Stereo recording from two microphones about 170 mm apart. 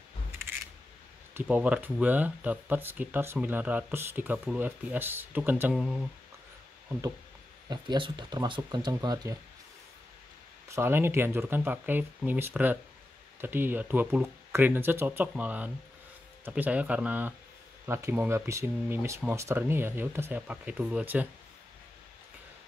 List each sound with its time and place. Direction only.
0.3 s a sound: 15° right (ahead or behind)
1.3 s speech: 10° right (ahead or behind)
7.7 s speech: 25° right (ahead or behind)
10.7 s speech: 15° right (ahead or behind)